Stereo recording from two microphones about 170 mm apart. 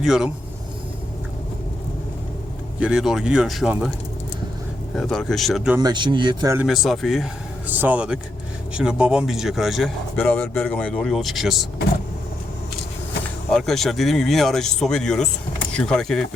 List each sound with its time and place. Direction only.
0.0 s speech: 5° right (ahead or behind)
2.8 s speech: centre (ahead or behind)
4.9 s speech: 5° left (ahead or behind)
5.8 s speech: 25° right (ahead or behind)
6.6 s speech: centre (ahead or behind)
7.7 s speech: 10° right (ahead or behind)
10.2 s speech: 10° left (ahead or behind)
13.5 s speech: centre (ahead or behind)